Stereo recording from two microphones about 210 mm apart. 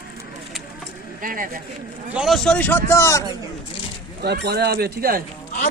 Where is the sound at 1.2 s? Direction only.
40° right (ahead or behind).